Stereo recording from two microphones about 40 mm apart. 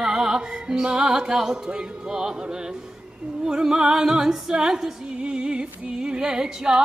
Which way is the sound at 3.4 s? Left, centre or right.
Centre.